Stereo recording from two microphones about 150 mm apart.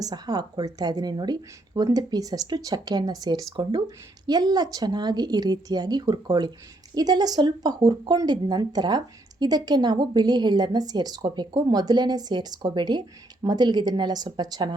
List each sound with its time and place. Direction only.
0.0 s speech: 25° right (ahead or behind)